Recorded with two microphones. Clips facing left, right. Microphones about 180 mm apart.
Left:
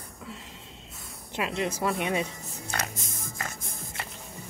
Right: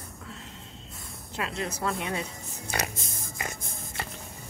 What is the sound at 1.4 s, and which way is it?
Speech, 15° left (ahead or behind).